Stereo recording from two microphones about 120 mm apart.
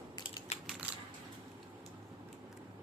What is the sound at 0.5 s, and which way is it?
Typewriter, 55° left (ahead or behind).